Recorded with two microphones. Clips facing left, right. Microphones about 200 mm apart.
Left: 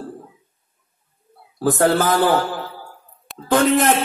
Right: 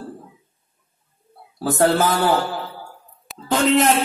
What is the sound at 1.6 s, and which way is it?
Music, 50° left (ahead or behind).